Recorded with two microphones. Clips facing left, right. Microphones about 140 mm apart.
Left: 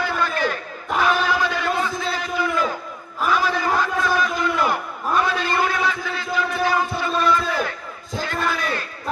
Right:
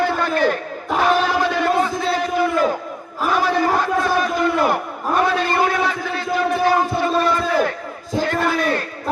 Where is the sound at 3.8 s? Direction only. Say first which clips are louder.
Right 3 dB; 50° right (ahead or behind).